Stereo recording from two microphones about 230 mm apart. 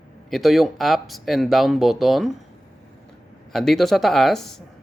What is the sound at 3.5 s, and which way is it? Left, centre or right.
Speech, centre.